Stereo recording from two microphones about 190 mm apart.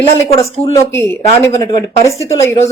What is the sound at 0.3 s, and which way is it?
Speech, 15° left (ahead or behind).